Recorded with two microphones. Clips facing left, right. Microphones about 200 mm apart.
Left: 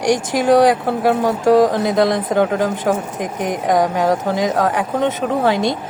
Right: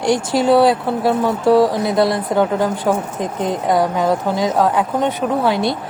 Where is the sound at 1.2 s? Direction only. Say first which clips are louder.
Even; 45° left (ahead or behind).